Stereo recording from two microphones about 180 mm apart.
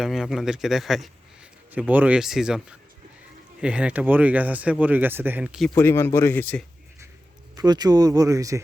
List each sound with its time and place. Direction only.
0.0 s speech: centre (ahead or behind)
5.7 s speech: 15° left (ahead or behind)
7.5 s speech: 20° right (ahead or behind)